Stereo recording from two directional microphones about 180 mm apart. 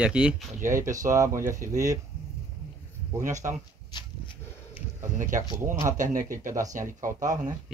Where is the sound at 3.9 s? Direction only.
25° left (ahead or behind).